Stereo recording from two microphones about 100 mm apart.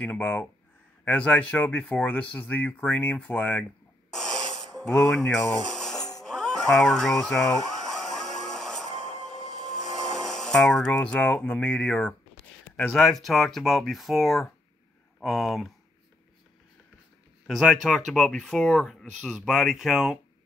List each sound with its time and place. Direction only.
0.0 s speech: 15° left (ahead or behind)
4.1 s snort: 5° left (ahead or behind)
4.8 s speech: 5° left (ahead or behind)
5.9 s music: 40° left (ahead or behind)
6.2 s a sound: 5° left (ahead or behind)
9.7 s speech: 5° left (ahead or behind)
17.5 s speech: centre (ahead or behind)